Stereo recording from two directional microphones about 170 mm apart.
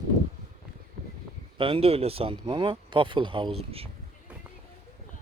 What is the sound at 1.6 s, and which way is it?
Speech, 30° right (ahead or behind).